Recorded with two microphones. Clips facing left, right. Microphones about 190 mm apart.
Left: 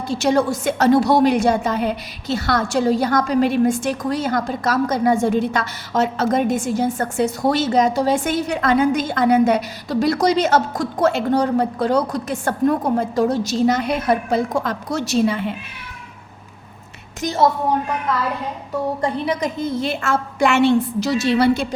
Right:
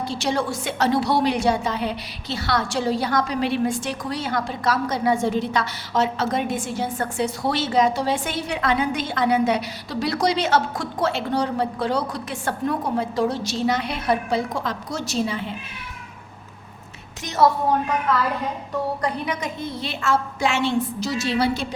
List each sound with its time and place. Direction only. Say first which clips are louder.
0.1 s a woman's voice: left 9 dB; 45° left (ahead or behind)
17.2 s a woman's voice: left 1 dB; 30° left (ahead or behind)
19.0 s a woman's voice: left 5 dB; 30° left (ahead or behind); by 21.7 s 60° left (ahead or behind)